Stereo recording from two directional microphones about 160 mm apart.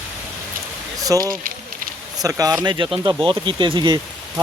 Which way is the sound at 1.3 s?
60° right (ahead or behind).